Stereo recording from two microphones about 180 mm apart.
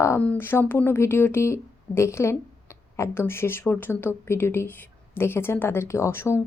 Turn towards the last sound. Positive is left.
turn(degrees=15)  # may be behind; listen again after turning